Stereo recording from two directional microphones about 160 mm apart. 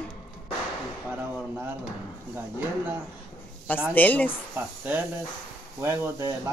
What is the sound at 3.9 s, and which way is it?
Speech, 10° left (ahead or behind).